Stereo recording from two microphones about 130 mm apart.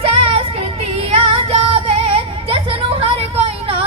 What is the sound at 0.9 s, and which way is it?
Music, 50° right (ahead or behind).